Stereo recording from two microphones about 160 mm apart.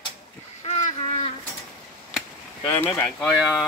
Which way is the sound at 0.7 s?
40° left (ahead or behind).